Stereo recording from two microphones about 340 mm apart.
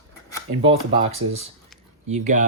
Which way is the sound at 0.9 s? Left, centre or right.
Centre.